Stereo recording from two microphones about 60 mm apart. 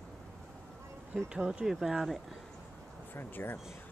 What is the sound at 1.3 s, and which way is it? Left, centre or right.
Speech, centre.